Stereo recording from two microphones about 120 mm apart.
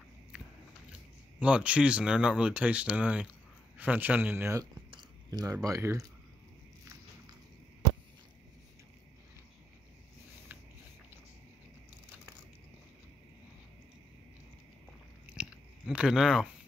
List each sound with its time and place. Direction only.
1.4 s speech: 10° right (ahead or behind)
4.9 s speech: 30° right (ahead or behind)
15.3 s biting: 10° right (ahead or behind)